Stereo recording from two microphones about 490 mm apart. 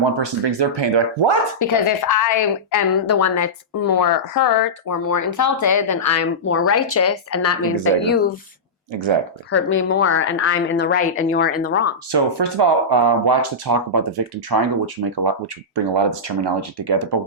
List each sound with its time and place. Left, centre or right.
0.0 s speech: right
1.5 s a woman's voice: left
3.9 s a woman's voice: left; by 8.4 s centre
8.9 s speech: right
9.6 s speech: left
12.1 s speech: right
15.1 s speech: right